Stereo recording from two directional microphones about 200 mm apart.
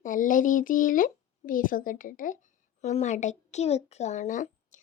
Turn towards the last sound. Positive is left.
turn(degrees=40)  # may be behind; listen again after turning